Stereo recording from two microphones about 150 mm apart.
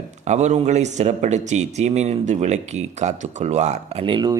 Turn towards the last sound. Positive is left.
turn(degrees=-30)  # may be behind; listen again after turning